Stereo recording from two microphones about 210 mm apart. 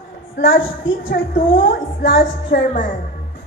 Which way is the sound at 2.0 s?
50° left (ahead or behind).